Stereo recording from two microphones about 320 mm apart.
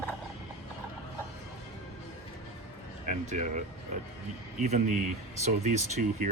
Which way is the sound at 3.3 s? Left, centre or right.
Right.